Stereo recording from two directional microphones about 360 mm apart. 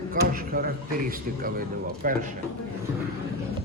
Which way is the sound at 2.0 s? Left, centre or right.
Right.